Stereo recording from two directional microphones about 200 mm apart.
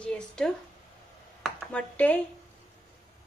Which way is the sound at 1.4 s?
5° left (ahead or behind).